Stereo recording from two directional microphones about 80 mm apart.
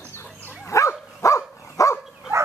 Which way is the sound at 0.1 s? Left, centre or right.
Left.